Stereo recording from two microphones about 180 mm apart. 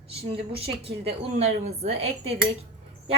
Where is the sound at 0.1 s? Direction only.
35° right (ahead or behind).